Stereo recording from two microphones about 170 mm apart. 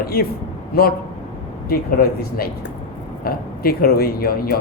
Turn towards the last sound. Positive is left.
turn(degrees=65)  # may be behind; listen again after turning